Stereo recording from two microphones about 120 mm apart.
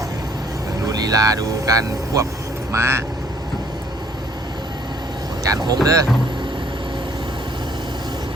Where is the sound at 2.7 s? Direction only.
20° right (ahead or behind).